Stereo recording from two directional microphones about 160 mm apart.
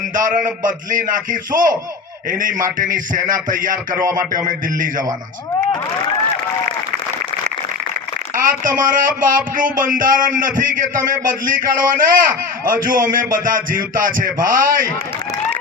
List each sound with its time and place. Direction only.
0.1 s speech: 55° right (ahead or behind)
3.9 s speech: 15° right (ahead or behind)
4.4 s speech: 55° right (ahead or behind)
8.4 s speech: 60° right (ahead or behind)